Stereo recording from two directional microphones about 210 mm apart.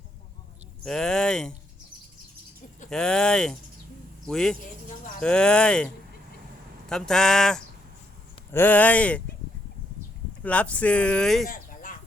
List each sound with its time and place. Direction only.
0.9 s speech: 5° left (ahead or behind)
2.9 s speech: 5° left (ahead or behind)
10.4 s speech: 5° left (ahead or behind)
11.4 s a sound: 40° left (ahead or behind)